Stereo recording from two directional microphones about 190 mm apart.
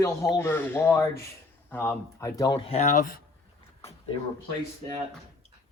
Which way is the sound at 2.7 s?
40° left (ahead or behind).